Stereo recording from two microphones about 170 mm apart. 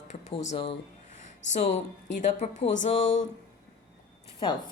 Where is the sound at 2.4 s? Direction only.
40° left (ahead or behind).